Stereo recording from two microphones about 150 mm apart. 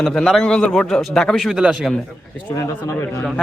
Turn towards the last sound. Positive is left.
turn(degrees=20)  # may be behind; listen again after turning